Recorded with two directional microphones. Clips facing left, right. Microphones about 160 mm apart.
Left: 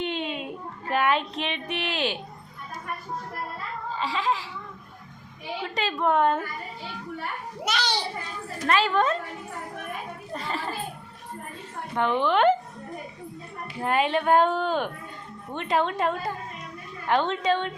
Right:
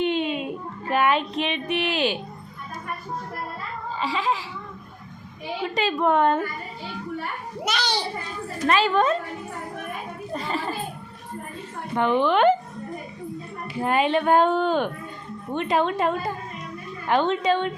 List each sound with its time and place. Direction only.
0.0 s child singing: 10° right (ahead or behind)
3.9 s a woman's voice: 5° right (ahead or behind)
5.6 s a woman's voice: 10° right (ahead or behind)
6.1 s speech: centre (ahead or behind)
7.7 s a woman's voice: 15° right (ahead or behind)
10.3 s a woman's voice: 15° right (ahead or behind)
11.9 s speech: 5° right (ahead or behind)
13.7 s a woman's voice: 5° right (ahead or behind)